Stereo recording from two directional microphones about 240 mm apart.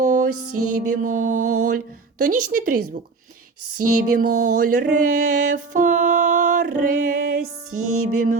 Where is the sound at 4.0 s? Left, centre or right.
Right.